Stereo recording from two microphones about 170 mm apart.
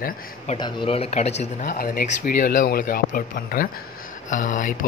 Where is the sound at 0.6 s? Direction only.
25° left (ahead or behind).